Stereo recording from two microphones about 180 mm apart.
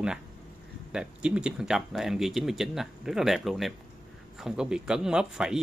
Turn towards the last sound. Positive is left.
turn(degrees=-5)  # may be behind; listen again after turning